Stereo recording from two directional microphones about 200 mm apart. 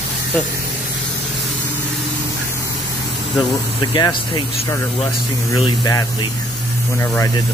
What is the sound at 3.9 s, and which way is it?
Speech, 20° left (ahead or behind).